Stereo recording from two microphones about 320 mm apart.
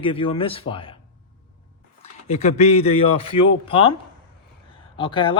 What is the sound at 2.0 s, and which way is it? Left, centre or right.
Speech, left.